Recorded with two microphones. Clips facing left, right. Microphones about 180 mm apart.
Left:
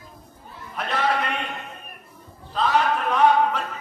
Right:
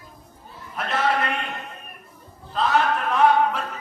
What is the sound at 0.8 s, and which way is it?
Speech, centre (ahead or behind).